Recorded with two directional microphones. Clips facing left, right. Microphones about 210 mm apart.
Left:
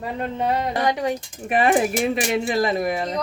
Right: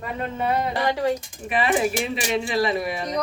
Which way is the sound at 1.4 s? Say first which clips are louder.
Left 3 dB; 45° left (ahead or behind).